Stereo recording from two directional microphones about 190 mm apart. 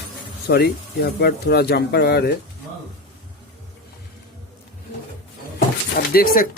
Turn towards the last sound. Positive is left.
turn(degrees=50)  # may be behind; listen again after turning